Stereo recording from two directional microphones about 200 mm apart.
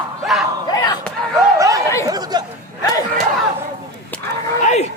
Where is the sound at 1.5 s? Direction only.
15° right (ahead or behind).